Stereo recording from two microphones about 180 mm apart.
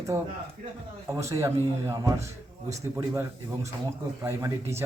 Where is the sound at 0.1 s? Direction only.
15° right (ahead or behind).